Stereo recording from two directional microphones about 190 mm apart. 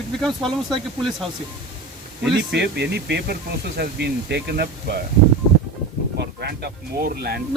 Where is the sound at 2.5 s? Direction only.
60° right (ahead or behind).